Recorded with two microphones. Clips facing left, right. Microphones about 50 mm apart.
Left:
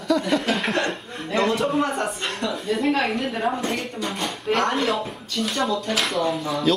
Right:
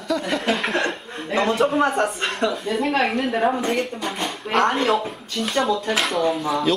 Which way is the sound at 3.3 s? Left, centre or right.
Centre.